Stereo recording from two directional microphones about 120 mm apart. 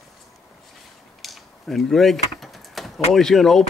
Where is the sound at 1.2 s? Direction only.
Centre (ahead or behind).